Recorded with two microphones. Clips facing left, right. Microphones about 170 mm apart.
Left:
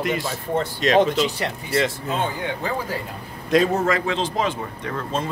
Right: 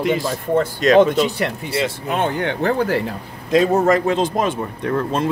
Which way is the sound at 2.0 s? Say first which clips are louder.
Right 5 dB; 70° right (ahead or behind).